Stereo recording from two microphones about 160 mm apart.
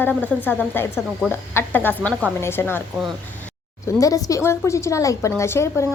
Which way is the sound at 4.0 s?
20° left (ahead or behind).